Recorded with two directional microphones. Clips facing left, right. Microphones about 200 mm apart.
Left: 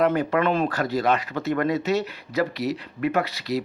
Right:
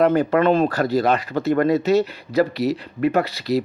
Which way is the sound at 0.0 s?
35° right (ahead or behind).